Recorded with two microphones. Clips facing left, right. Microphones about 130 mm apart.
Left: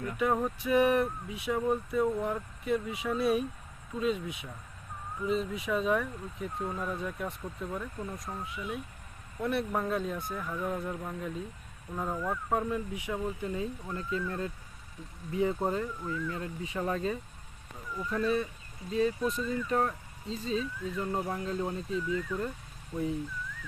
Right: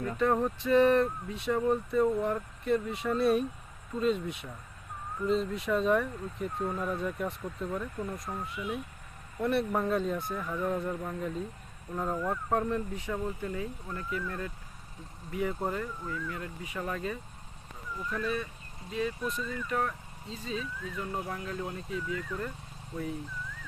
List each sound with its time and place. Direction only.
0.2 s speech: 5° left (ahead or behind); by 22.2 s 25° left (ahead or behind)